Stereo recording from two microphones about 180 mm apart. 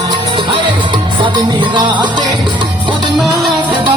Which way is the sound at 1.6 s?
25° right (ahead or behind).